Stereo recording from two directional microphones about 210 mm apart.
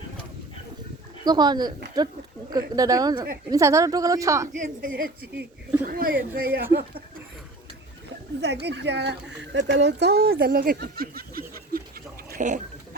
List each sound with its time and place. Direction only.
1.2 s speech: 20° right (ahead or behind)
4.5 s a child's voice: 40° right (ahead or behind)
8.4 s a child's voice: 55° right (ahead or behind)
12.3 s bird: 35° right (ahead or behind)